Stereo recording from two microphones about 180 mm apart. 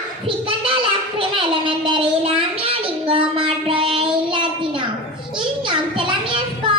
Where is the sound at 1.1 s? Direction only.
30° right (ahead or behind).